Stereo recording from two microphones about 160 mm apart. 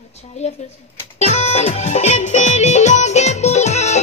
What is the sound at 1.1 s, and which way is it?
Music, 45° left (ahead or behind).